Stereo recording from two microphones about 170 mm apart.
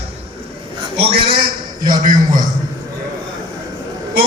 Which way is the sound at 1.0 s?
30° right (ahead or behind).